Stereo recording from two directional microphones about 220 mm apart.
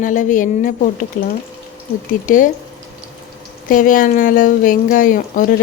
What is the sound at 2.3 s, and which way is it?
Speech, 35° left (ahead or behind).